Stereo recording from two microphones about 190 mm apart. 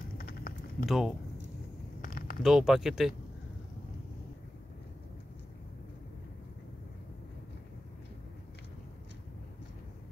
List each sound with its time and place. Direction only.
0.2 s typing: 50° left (ahead or behind)
0.8 s speech: centre (ahead or behind)
2.0 s a sound: 50° left (ahead or behind)
2.4 s speech: centre (ahead or behind)